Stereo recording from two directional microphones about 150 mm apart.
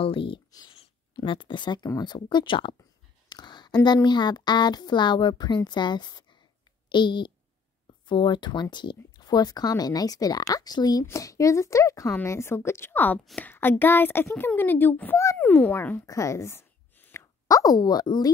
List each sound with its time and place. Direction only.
0.0 s a child's voice: 35° left (ahead or behind); by 13.2 s 10° left (ahead or behind)
13.2 s a woman's voice: centre (ahead or behind)
13.5 s a child's voice: 15° left (ahead or behind)